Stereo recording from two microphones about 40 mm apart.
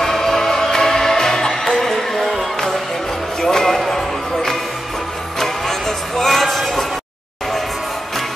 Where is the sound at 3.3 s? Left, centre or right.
Centre.